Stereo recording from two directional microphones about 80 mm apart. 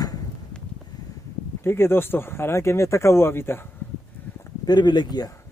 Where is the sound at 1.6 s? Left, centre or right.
Left.